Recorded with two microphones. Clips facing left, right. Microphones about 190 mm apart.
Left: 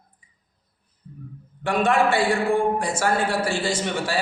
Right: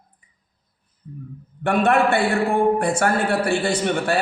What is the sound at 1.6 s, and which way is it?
A man's voice, 60° right (ahead or behind).